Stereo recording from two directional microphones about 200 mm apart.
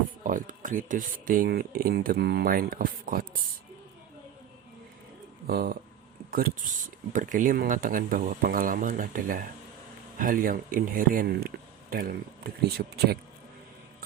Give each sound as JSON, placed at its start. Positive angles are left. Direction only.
{"t": 0.3, "sound": "speech", "side_deg": -40}
{"t": 5.5, "sound": "speech", "side_deg": -50}
{"t": 7.1, "sound": "speech", "side_deg": -40}